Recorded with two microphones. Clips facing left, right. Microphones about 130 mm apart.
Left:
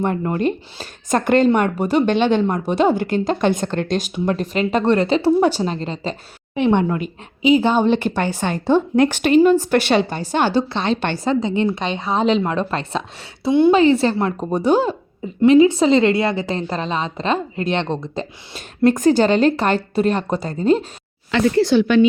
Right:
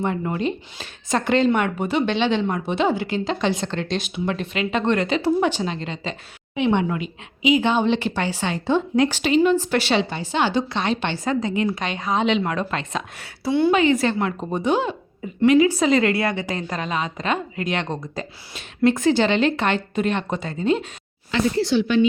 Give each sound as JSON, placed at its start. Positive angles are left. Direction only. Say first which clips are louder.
{"t": 0.0, "sound": "a woman's voice", "louder": "left 4 dB", "side_deg": 45}
{"t": 10.7, "sound": "a woman's voice", "louder": "left 3 dB", "side_deg": 30}
{"t": 11.0, "sound": "a woman's voice", "louder": "left 3 dB", "side_deg": 45}
{"t": 11.3, "sound": "a woman's voice", "louder": "left 4 dB", "side_deg": 25}
{"t": 15.4, "sound": "a woman's voice", "louder": "left 4 dB", "side_deg": 25}
{"t": 18.5, "sound": "a woman's voice", "louder": "left 3 dB", "side_deg": 40}
{"t": 21.2, "sound": "speech", "louder": "left 5 dB", "side_deg": 60}